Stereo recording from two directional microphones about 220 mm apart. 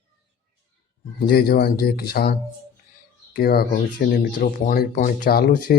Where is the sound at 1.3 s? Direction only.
45° left (ahead or behind).